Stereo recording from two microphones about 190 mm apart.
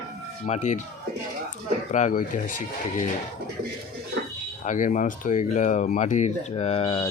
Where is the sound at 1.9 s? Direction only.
40° left (ahead or behind).